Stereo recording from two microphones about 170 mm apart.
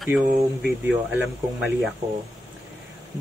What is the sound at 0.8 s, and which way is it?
Speech, 10° right (ahead or behind).